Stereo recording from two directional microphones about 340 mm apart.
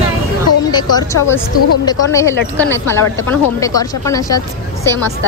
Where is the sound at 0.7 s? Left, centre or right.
Centre.